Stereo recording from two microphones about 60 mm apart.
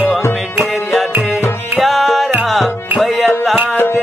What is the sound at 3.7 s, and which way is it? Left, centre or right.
Music, left.